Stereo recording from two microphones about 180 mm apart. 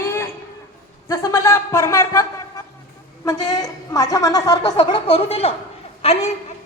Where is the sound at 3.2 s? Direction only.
20° left (ahead or behind).